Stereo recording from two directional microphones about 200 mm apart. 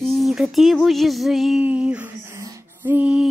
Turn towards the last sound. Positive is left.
turn(degrees=-5)  # may be behind; listen again after turning